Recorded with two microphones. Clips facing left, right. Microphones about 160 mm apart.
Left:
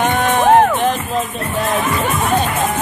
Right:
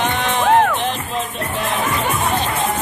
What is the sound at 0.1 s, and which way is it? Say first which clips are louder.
Music: left 4 dB; 50° left (ahead or behind).